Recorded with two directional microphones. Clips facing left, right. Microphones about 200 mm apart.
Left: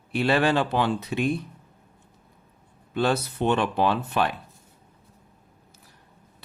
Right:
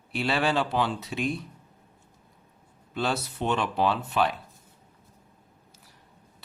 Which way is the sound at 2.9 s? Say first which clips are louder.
Left 5 dB; 55° left (ahead or behind).